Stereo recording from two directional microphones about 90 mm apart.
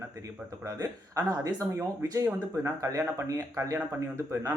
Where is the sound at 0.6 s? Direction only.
35° right (ahead or behind).